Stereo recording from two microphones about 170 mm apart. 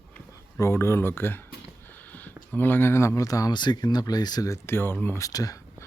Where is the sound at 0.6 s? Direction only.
15° left (ahead or behind).